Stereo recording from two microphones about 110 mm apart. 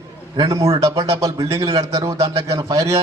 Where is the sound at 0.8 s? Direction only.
30° right (ahead or behind).